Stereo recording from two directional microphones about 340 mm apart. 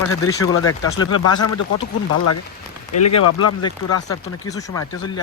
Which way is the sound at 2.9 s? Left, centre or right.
Left.